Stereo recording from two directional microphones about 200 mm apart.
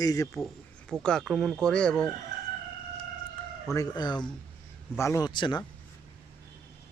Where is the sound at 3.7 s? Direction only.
20° left (ahead or behind).